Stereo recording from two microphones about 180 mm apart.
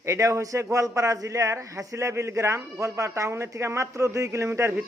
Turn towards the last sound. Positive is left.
turn(degrees=-15)  # may be behind; listen again after turning